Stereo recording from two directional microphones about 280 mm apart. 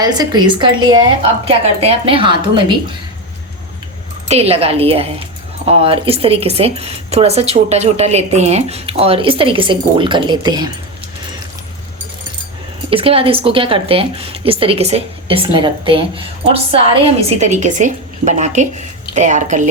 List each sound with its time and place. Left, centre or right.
0.0 s a woman's voice: centre
4.3 s speech: right
12.9 s speech: centre